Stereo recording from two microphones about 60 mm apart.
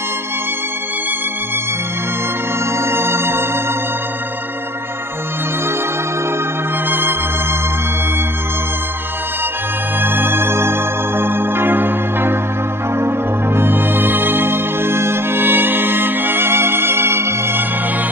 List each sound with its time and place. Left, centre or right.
2.7 s organ: right
6.9 s music: right
10.0 s music: right